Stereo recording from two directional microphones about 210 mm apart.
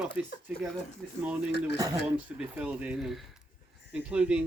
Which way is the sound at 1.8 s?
15° right (ahead or behind).